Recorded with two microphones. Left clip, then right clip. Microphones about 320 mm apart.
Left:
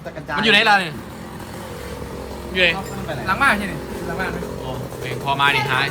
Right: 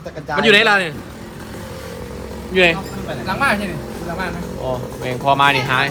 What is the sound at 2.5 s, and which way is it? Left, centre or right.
A man's voice, centre.